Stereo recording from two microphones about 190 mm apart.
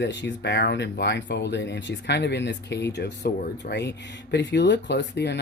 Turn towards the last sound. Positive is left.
turn(degrees=65)  # may be behind; listen again after turning